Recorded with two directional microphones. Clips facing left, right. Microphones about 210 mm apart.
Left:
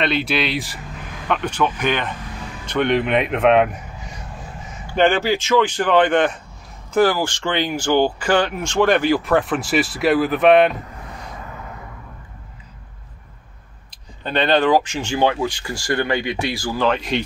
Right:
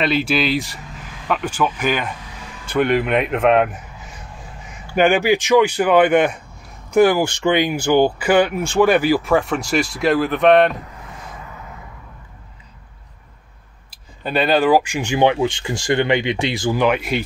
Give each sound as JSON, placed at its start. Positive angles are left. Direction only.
{"t": 0.0, "sound": "speech", "side_deg": 0}
{"t": 4.9, "sound": "speech", "side_deg": -10}
{"t": 13.8, "sound": "speech", "side_deg": -5}